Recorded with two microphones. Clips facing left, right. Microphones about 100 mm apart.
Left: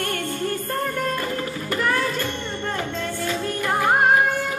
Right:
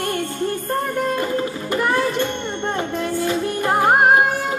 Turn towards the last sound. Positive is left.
turn(degrees=-25)  # may be behind; listen again after turning